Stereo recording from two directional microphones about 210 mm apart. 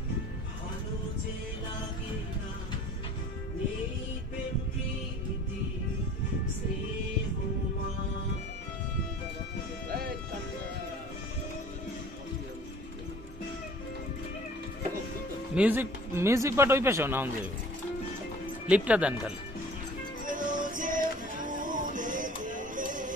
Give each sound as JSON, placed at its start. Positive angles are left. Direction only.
{"t": 15.5, "sound": "speech", "side_deg": -10}
{"t": 18.7, "sound": "speech", "side_deg": -5}
{"t": 20.2, "sound": "music", "side_deg": -40}